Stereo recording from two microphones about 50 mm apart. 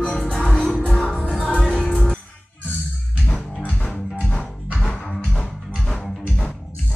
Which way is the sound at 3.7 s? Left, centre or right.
Left.